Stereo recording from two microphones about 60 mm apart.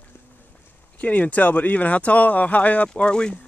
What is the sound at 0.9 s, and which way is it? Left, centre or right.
Speech, left.